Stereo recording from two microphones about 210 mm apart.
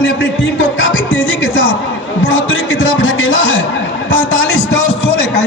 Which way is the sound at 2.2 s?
65° left (ahead or behind).